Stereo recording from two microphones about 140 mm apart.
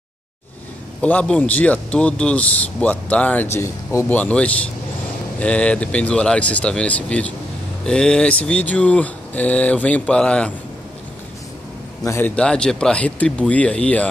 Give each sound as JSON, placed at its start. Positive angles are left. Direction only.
{"t": 1.0, "sound": "speech", "side_deg": 10}
{"t": 12.0, "sound": "a man's voice", "side_deg": 20}
{"t": 12.4, "sound": "speech", "side_deg": 5}